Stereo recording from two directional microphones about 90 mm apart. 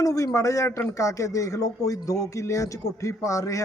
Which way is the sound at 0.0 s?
40° left (ahead or behind).